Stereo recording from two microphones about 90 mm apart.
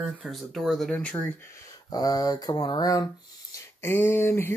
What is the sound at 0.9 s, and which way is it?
Speech, 15° left (ahead or behind).